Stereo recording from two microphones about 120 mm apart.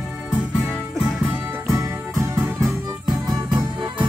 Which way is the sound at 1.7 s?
25° right (ahead or behind).